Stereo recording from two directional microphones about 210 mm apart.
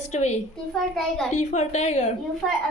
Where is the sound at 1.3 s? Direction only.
35° left (ahead or behind).